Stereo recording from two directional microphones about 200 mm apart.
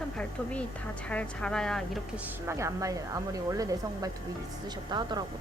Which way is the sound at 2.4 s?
15° right (ahead or behind).